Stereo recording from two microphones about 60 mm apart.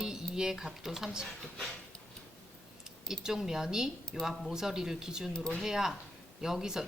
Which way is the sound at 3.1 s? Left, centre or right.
Centre.